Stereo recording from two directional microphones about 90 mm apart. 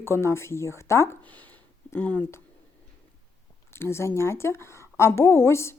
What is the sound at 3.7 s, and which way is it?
A woman's voice, 30° left (ahead or behind).